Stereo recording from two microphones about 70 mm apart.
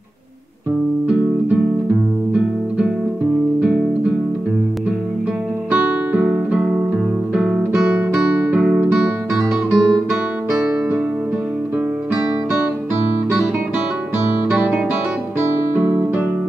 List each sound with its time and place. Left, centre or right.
5.7 s guitar: right
7.4 s music: centre
7.9 s music: centre
9.3 s guitar: centre
10.5 s music: centre